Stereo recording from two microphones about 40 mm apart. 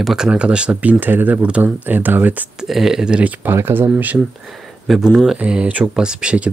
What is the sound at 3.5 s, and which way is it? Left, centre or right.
Speech, right.